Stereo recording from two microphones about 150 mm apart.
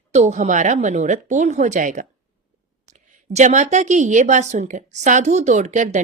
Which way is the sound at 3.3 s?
55° right (ahead or behind).